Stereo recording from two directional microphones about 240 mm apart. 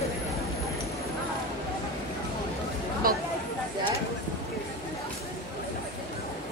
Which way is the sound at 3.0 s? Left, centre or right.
Right.